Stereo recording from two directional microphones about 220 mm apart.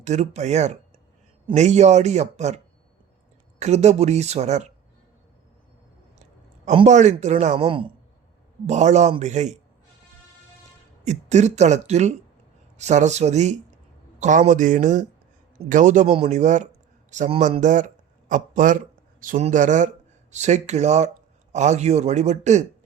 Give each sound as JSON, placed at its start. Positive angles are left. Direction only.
{"t": 0.0, "sound": "a woman's voice", "side_deg": -30}
{"t": 3.6, "sound": "a woman's voice", "side_deg": -30}
{"t": 6.7, "sound": "a woman's voice", "side_deg": -30}
{"t": 11.0, "sound": "a woman's voice", "side_deg": -30}